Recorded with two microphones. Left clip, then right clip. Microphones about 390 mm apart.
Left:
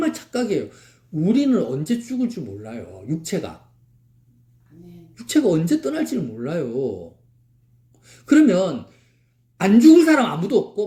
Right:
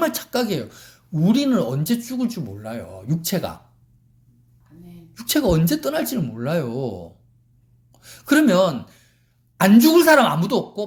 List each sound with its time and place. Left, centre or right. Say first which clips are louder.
0.0 s speech: right 2 dB; right
5.1 s speech: left 1 dB; right
7.9 s speech: left 2 dB; right